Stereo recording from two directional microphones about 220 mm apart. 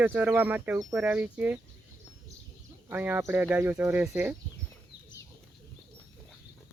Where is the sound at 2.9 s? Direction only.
10° right (ahead or behind).